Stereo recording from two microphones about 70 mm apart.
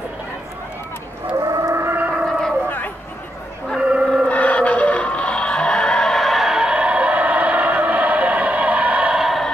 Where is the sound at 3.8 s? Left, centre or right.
Centre.